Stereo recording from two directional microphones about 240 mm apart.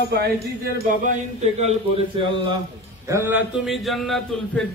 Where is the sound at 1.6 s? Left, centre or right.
Right.